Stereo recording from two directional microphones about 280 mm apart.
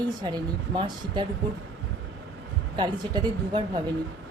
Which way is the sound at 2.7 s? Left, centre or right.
Centre.